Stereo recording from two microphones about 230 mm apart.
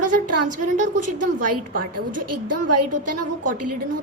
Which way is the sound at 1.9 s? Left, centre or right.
Right.